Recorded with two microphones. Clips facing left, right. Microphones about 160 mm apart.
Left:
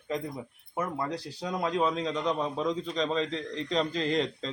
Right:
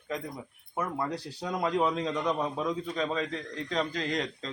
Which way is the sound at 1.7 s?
15° right (ahead or behind).